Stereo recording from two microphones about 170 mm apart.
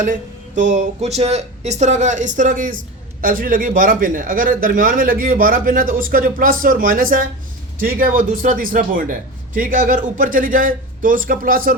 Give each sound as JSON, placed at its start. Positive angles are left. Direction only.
{"t": 0.0, "sound": "a man's voice", "side_deg": -50}